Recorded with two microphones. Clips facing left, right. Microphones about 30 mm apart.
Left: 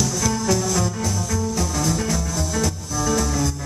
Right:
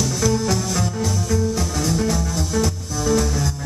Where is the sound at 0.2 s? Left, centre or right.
Centre.